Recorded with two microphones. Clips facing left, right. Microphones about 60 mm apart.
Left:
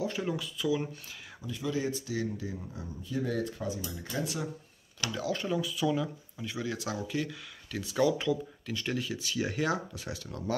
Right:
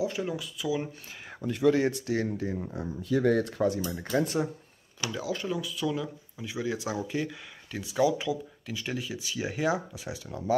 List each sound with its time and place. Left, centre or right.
0.0 s speech: centre
1.4 s speech: right
3.9 s speech: right
5.0 s speech: centre
6.3 s speech: centre